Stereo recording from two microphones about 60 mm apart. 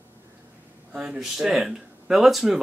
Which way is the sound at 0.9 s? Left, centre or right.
Centre.